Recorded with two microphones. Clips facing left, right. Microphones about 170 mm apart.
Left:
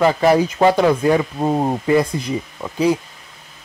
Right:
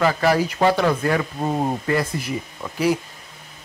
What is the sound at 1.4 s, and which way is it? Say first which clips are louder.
Speech: left 4 dB; 30° left (ahead or behind).